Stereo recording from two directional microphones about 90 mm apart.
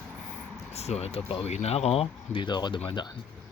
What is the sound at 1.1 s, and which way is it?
Speech, 90° left.